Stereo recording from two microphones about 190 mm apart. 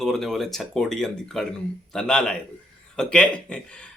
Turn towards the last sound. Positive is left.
turn(degrees=5)  # may be behind; listen again after turning